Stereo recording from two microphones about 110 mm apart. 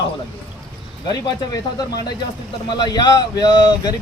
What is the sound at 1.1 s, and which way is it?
Speech, 35° left (ahead or behind).